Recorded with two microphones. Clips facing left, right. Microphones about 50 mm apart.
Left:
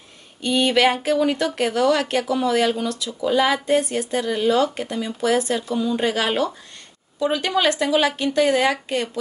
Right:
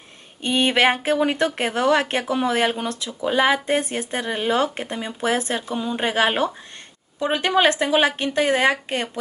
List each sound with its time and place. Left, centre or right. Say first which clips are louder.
0.4 s a woman's voice: left 1 dB; right